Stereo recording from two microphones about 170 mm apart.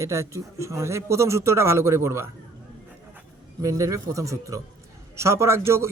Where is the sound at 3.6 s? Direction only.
20° right (ahead or behind).